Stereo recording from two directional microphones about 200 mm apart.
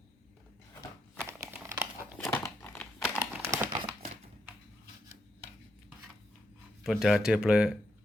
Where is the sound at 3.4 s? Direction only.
15° right (ahead or behind).